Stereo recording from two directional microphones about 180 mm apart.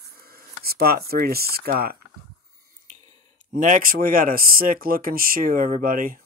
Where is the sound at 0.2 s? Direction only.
60° right (ahead or behind).